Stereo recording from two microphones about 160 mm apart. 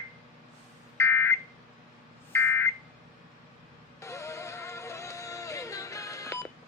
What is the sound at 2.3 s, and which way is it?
Smoke detector, 15° left (ahead or behind).